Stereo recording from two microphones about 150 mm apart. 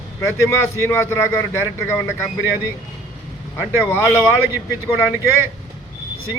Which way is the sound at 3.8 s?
15° left (ahead or behind).